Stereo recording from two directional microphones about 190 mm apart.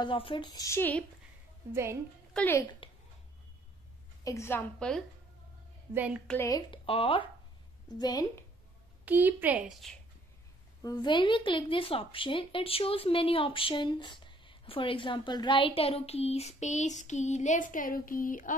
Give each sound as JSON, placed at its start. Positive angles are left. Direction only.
{"t": 0.0, "sound": "a woman's voice", "side_deg": 25}
{"t": 1.7, "sound": "a woman's voice", "side_deg": -15}
{"t": 2.3, "sound": "a woman's voice", "side_deg": 10}
{"t": 2.8, "sound": "a sound", "side_deg": 30}
{"t": 4.2, "sound": "a woman's voice", "side_deg": 15}
{"t": 6.2, "sound": "a woman's voice", "side_deg": 15}
{"t": 6.7, "sound": "a woman's voice", "side_deg": 30}
{"t": 9.0, "sound": "a woman's voice", "side_deg": -10}
{"t": 10.8, "sound": "a woman's voice", "side_deg": 20}